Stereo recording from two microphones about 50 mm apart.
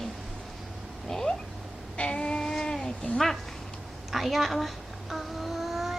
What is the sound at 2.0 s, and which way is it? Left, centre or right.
Sheep, centre.